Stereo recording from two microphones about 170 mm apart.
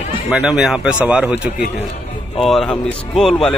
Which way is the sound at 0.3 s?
5° right (ahead or behind).